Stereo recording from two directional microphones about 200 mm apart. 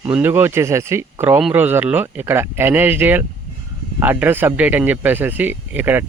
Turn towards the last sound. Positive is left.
turn(degrees=-10)  # may be behind; listen again after turning